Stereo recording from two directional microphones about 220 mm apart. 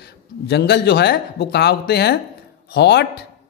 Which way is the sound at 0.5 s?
50° left (ahead or behind).